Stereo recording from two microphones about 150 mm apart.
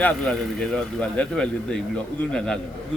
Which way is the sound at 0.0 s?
5° left (ahead or behind).